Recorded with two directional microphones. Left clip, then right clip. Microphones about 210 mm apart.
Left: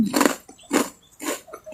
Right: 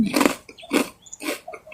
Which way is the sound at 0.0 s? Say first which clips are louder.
Even; centre (ahead or behind).